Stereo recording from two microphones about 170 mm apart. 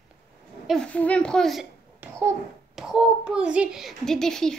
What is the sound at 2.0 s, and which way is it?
Babbling, 15° right (ahead or behind).